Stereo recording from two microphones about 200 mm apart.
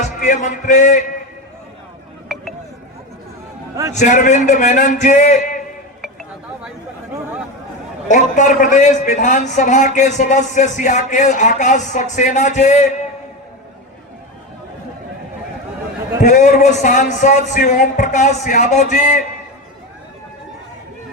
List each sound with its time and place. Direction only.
0.2 s a man's voice: 40° left (ahead or behind)
3.9 s a man's voice: 40° left (ahead or behind)
8.0 s a man's voice: 40° left (ahead or behind)
16.2 s a man's voice: 40° left (ahead or behind)